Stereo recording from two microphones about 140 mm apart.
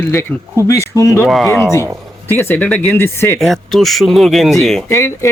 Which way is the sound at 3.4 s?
Centre (ahead or behind).